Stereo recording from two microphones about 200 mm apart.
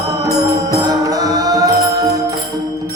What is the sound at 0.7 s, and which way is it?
Music, 20° right (ahead or behind).